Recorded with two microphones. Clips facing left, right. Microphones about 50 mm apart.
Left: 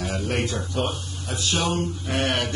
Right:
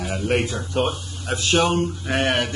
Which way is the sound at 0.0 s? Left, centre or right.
Centre.